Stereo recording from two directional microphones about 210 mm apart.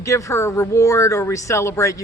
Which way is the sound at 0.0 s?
15° left (ahead or behind).